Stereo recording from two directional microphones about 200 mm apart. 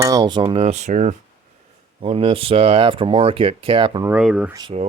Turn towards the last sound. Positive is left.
turn(degrees=-20)  # may be behind; listen again after turning